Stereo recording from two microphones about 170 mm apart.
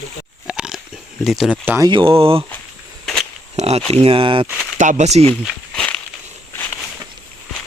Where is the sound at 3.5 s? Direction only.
40° right (ahead or behind).